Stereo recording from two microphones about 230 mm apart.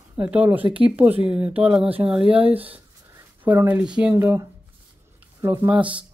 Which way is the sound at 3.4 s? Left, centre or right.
Centre.